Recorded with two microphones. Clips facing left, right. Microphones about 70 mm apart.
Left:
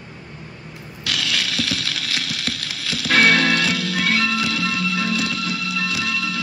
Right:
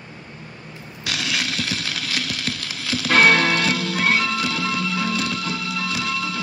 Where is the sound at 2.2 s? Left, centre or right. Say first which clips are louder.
Even; right.